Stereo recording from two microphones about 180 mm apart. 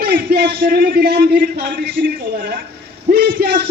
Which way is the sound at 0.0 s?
60° right (ahead or behind).